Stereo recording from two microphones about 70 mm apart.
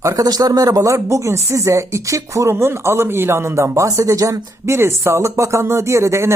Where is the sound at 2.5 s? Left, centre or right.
Right.